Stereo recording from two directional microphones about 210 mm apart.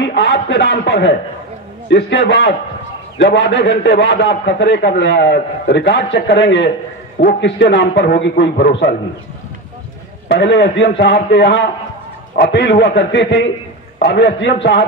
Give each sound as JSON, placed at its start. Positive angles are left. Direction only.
{"t": 0.0, "sound": "a man's voice", "side_deg": 55}
{"t": 10.2, "sound": "a man's voice", "side_deg": 55}